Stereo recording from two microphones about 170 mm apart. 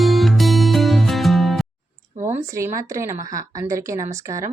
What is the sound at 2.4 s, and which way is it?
A woman's voice, 15° right (ahead or behind).